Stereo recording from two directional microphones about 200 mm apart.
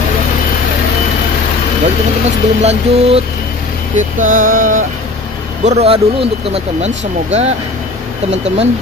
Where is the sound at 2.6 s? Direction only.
30° right (ahead or behind).